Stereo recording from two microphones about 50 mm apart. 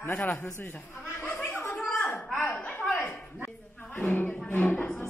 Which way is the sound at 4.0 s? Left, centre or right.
Left.